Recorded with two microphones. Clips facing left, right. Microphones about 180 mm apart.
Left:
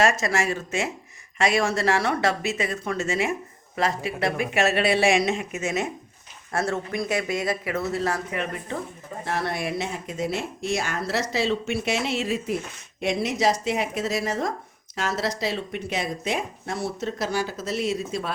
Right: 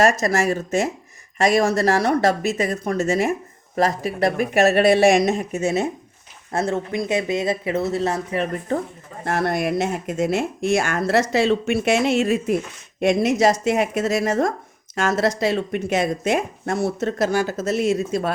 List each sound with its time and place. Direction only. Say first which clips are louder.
0.0 s speech: right 4 dB; 40° right (ahead or behind)
8.7 s speech: right 7 dB; 45° right (ahead or behind)